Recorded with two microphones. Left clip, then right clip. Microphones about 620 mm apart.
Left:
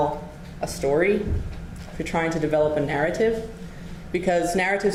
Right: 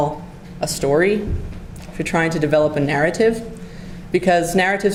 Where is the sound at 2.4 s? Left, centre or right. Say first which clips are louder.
Right 4 dB; right.